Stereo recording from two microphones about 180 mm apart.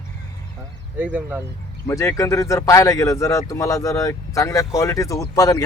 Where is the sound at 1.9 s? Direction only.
15° left (ahead or behind).